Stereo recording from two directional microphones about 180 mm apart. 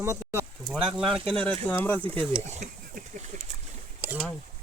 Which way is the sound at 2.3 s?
40° right (ahead or behind).